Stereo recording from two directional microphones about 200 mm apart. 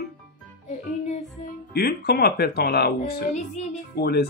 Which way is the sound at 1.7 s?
50° left (ahead or behind).